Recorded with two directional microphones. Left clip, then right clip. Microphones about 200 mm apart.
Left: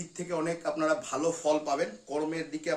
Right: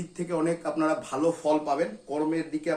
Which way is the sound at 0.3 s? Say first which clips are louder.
Right 3 dB; 5° left (ahead or behind).